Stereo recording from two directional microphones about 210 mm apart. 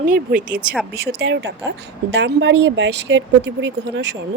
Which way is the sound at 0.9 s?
50° right (ahead or behind).